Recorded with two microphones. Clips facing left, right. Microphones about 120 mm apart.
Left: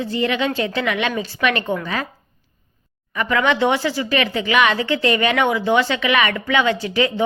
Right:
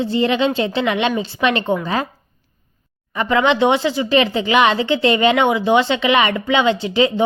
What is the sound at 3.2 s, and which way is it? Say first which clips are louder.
Speech: right 3 dB; 25° right (ahead or behind).